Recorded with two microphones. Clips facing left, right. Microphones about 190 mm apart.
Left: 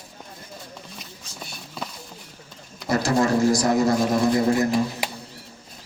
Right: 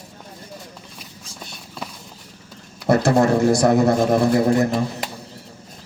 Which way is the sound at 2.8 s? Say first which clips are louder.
Right 6 dB; 60° right (ahead or behind).